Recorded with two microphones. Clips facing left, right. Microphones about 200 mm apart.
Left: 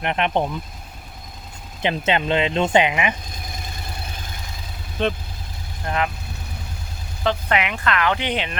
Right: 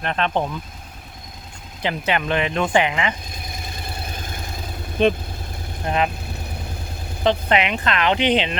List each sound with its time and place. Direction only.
0.0 s speech: 15° left (ahead or behind)
1.8 s speech: 20° left (ahead or behind)
5.0 s speech: 15° right (ahead or behind)
7.4 s speech: 25° right (ahead or behind)